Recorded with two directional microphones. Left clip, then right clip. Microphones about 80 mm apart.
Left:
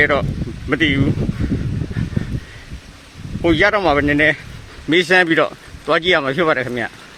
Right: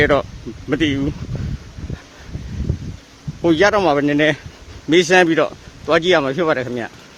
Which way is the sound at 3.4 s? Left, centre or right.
Right.